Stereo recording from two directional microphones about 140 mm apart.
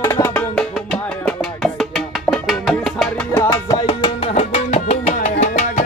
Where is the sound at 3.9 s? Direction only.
40° left (ahead or behind); by 5.8 s 55° left (ahead or behind).